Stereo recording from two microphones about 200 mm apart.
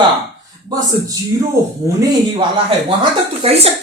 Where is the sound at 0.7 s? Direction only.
20° right (ahead or behind).